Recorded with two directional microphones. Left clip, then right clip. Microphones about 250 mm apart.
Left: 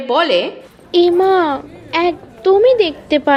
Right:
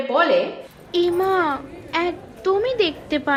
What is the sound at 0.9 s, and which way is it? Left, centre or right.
A child's voice, centre.